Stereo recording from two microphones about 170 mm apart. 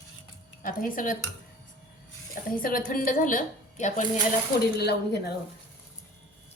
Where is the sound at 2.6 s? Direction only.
55° left (ahead or behind).